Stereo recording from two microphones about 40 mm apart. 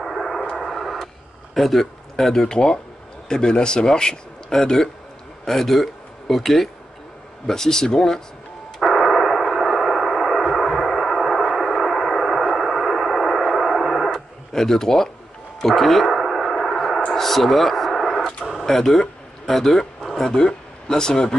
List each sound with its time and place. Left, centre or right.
0.0 s radio: centre
2.4 s a man's voice: centre
8.8 s gong: centre
15.6 s a sound: centre
20.2 s speech: centre